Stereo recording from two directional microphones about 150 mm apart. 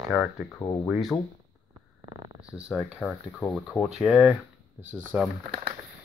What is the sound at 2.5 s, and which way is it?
Speech, centre (ahead or behind).